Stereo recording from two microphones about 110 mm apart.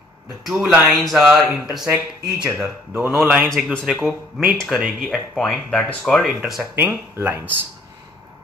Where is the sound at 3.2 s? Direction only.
5° right (ahead or behind).